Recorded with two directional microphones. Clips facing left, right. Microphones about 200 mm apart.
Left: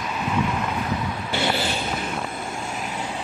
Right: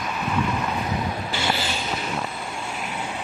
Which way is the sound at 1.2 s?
60° left (ahead or behind).